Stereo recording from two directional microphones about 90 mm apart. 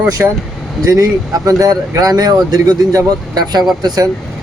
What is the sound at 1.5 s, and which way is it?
Speech, 40° right (ahead or behind).